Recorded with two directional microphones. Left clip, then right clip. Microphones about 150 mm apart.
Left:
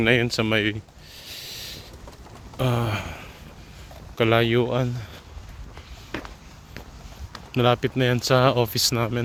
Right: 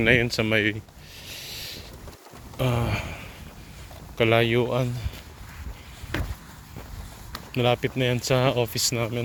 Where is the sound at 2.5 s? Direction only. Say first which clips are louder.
Left 1 dB; 35° left (ahead or behind).